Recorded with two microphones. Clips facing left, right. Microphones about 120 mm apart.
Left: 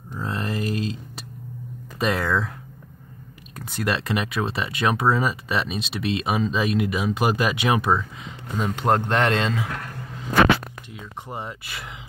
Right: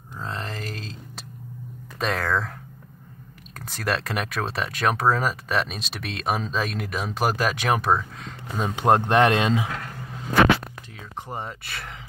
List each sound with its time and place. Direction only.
0.2 s a sound: 5° left (ahead or behind)
2.0 s speech: 5° left (ahead or behind)
3.5 s speech: centre (ahead or behind)
8.6 s speech: 20° right (ahead or behind)
11.2 s speech: centre (ahead or behind)